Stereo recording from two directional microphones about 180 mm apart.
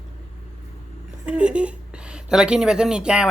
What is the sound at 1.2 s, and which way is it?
Speech, 5° right (ahead or behind).